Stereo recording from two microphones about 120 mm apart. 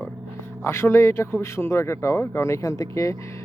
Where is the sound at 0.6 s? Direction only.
20° left (ahead or behind).